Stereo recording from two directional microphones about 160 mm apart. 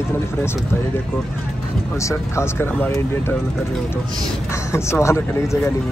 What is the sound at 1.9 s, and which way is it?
Speech, 20° left (ahead or behind).